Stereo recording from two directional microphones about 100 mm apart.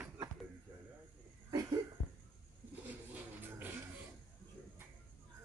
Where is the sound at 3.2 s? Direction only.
20° right (ahead or behind).